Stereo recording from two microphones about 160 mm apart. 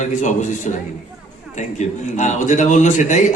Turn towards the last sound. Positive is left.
turn(degrees=50)  # may be behind; listen again after turning